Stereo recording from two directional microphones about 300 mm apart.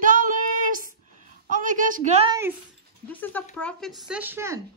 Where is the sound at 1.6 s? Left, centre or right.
Right.